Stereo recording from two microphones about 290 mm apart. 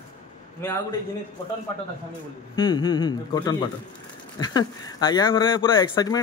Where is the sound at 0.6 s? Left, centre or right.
Centre.